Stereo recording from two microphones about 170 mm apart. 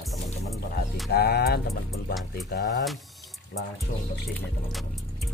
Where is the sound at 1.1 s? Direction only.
70° left (ahead or behind).